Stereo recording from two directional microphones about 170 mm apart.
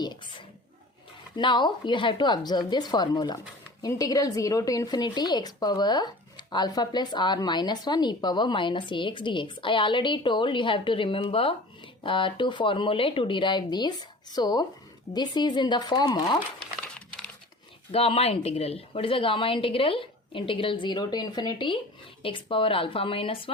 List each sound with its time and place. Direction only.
0.0 s a sound: 25° left (ahead or behind)
1.4 s a woman's voice: 30° left (ahead or behind)
17.1 s crumpling: 5° left (ahead or behind)
17.9 s a woman's voice: 35° left (ahead or behind)